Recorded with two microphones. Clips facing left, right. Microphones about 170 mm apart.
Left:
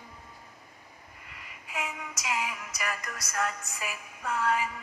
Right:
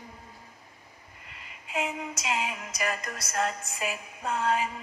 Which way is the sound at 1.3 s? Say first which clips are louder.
Right 5 dB; 25° right (ahead or behind).